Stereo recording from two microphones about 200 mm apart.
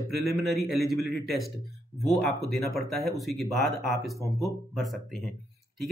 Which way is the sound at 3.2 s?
Centre (ahead or behind).